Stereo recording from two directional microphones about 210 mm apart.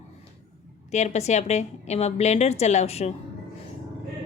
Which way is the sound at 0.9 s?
30° left (ahead or behind).